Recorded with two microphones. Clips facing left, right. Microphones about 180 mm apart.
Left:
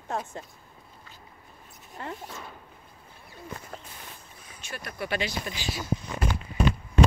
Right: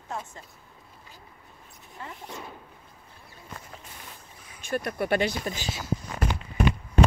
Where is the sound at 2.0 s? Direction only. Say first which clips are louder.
Left 4 dB; 65° left (ahead or behind).